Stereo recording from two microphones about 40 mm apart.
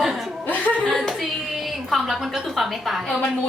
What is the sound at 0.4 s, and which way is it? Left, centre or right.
Chuckle, left.